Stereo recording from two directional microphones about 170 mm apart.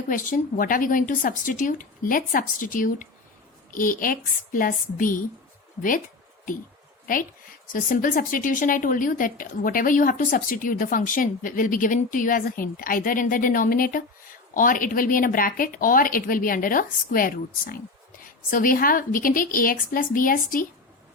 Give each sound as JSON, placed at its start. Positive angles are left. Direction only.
{"t": 0.1, "sound": "a woman's voice", "side_deg": 50}
{"t": 7.7, "sound": "a woman's voice", "side_deg": 55}